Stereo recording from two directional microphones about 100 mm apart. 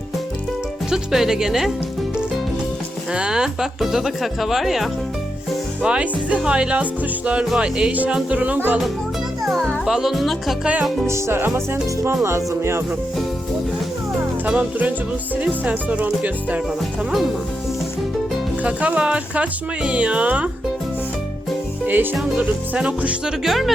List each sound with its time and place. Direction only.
0.9 s speech: 5° right (ahead or behind)
3.1 s speech: 5° right (ahead or behind)
9.4 s music: centre (ahead or behind)
9.8 s speech: 5° right (ahead or behind)
11.0 s music: 25° right (ahead or behind)
14.4 s speech: 15° right (ahead or behind)
17.1 s speech: centre (ahead or behind)
18.6 s speech: 10° right (ahead or behind)
21.8 s music: 20° right (ahead or behind)
22.4 s speech: 15° right (ahead or behind)